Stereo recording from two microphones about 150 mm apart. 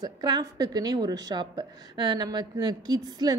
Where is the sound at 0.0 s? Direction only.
25° right (ahead or behind).